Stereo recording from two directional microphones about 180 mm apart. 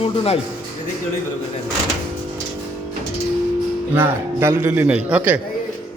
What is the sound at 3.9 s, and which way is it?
A man's voice, 15° right (ahead or behind).